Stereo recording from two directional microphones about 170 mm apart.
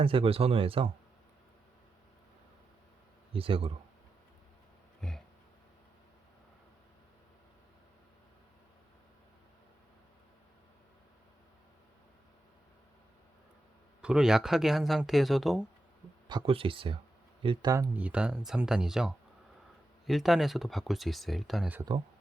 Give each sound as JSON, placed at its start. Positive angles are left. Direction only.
{"t": 0.0, "sound": "speech", "side_deg": -30}
{"t": 3.3, "sound": "speech", "side_deg": -35}
{"t": 4.9, "sound": "a sound", "side_deg": 0}
{"t": 14.0, "sound": "speech", "side_deg": -5}
{"t": 16.3, "sound": "speech", "side_deg": -30}
{"t": 17.9, "sound": "speech", "side_deg": -10}
{"t": 21.8, "sound": "speech", "side_deg": -25}